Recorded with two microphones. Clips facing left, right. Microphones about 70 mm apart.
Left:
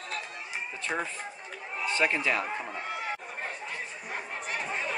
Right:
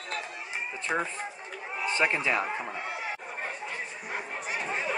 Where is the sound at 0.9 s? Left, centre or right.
Centre.